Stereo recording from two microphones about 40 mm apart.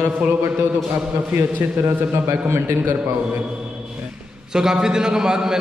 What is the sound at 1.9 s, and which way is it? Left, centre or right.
Speech, right.